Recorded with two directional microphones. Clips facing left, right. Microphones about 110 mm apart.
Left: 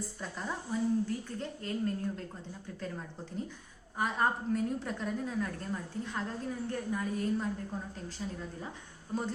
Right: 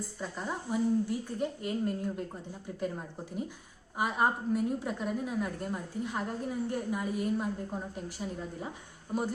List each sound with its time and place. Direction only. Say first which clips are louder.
0.2 s a woman's voice: right 3 dB; 5° right (ahead or behind)
9.1 s a woman's voice: right 3 dB; 15° right (ahead or behind)